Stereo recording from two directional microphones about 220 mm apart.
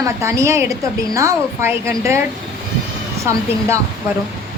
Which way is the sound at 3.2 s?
15° right (ahead or behind).